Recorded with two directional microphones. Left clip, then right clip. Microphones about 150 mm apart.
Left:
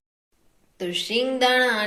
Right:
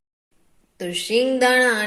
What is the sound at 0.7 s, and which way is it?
Speech, 55° right (ahead or behind).